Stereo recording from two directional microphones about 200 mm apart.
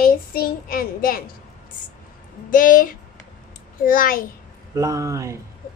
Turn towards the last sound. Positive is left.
turn(degrees=-15)  # may be behind; listen again after turning